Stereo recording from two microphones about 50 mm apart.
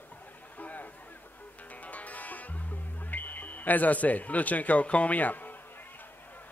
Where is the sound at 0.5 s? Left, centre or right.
Left.